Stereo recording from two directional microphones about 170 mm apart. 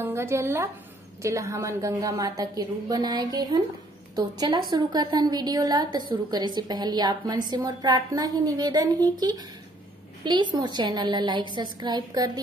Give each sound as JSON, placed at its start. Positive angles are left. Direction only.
{"t": 0.0, "sound": "a woman's voice", "side_deg": -15}